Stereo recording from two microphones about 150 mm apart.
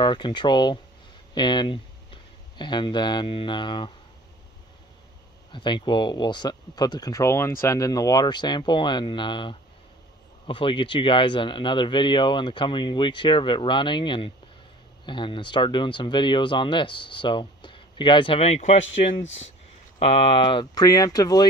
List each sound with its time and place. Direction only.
0.0 s speech: 30° left (ahead or behind)
5.5 s speech: 30° left (ahead or behind)